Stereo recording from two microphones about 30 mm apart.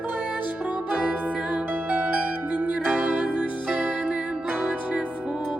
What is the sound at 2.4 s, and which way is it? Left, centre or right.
Music, right.